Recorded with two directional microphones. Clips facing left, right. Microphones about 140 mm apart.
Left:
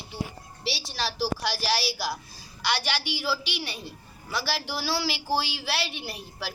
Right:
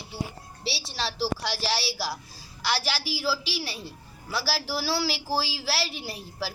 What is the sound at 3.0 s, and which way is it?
Speech, 35° right (ahead or behind).